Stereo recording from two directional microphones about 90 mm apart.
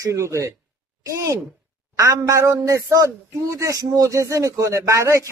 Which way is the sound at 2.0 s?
30° right (ahead or behind).